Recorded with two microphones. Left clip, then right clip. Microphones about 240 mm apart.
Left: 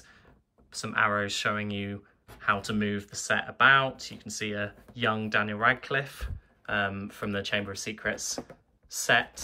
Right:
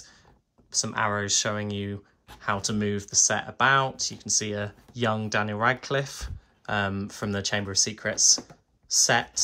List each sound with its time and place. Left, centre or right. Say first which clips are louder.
0.7 s speech: even; centre